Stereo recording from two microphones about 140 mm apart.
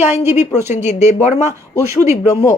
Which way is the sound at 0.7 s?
55° left (ahead or behind).